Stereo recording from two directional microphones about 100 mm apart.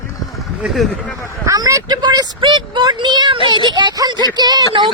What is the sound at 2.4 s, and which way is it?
Speech, 55° right (ahead or behind).